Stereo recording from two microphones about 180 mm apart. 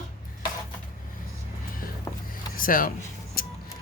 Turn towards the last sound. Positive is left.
turn(degrees=55)  # may be behind; listen again after turning